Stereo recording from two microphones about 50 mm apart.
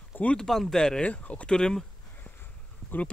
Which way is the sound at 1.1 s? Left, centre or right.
Left.